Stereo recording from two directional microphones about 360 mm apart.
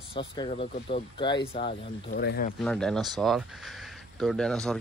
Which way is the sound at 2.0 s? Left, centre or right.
Left.